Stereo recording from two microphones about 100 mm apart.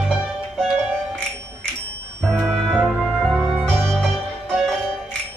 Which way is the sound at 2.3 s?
5° left (ahead or behind).